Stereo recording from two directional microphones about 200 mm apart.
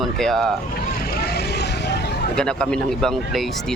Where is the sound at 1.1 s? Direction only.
55° left (ahead or behind).